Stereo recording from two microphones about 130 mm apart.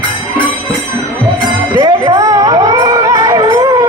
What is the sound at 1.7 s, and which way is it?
Music, 35° right (ahead or behind).